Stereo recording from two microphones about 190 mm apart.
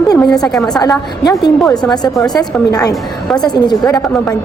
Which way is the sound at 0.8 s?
20° left (ahead or behind).